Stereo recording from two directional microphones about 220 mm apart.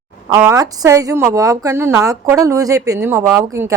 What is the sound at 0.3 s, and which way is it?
A woman's voice, 15° right (ahead or behind).